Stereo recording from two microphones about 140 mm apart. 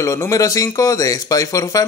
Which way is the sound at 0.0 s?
25° left (ahead or behind).